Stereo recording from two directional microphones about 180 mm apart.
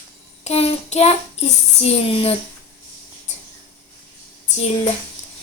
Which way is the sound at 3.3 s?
40° left (ahead or behind).